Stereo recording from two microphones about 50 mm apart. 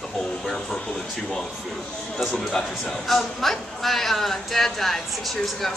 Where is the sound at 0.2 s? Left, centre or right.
Centre.